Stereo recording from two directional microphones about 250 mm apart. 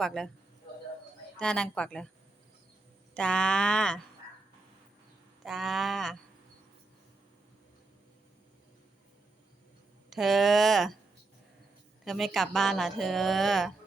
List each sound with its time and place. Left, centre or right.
0.0 s a woman's voice: centre
1.4 s a woman's voice: centre
3.2 s a woman's voice: centre
5.5 s a woman's voice: centre
10.1 s a woman's voice: centre
12.0 s a woman's voice: centre